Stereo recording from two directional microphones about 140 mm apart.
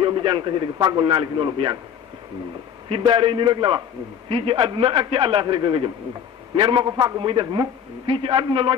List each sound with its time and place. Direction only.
0.0 s a man's voice: 35° right (ahead or behind)
2.9 s a man's voice: 35° right (ahead or behind)